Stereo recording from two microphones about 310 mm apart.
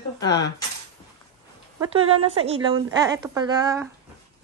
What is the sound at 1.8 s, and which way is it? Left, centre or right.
A woman's voice, centre.